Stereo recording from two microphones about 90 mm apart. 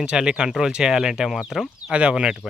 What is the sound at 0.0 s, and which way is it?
Speech, 10° right (ahead or behind).